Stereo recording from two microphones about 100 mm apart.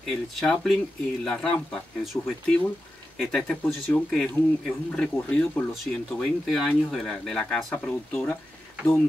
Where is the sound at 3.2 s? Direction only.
5° left (ahead or behind).